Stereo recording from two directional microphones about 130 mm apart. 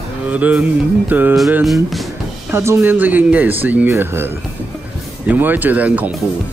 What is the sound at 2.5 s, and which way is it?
Speech, 20° right (ahead or behind).